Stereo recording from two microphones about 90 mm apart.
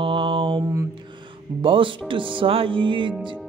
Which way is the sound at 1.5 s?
70° right (ahead or behind).